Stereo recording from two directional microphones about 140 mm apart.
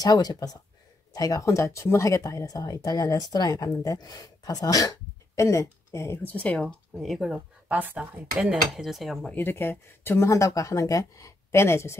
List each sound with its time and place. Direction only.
0.0 s speech: 30° left (ahead or behind); by 7.3 s centre (ahead or behind)
7.3 s speech: 10° right (ahead or behind)
9.3 s speech: 15° left (ahead or behind)